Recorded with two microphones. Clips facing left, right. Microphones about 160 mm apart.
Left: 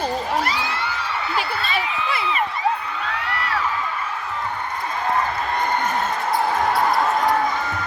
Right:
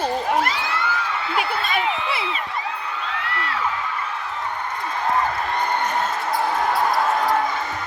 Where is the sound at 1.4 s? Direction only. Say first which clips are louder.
Right 3 dB; 55° right (ahead or behind).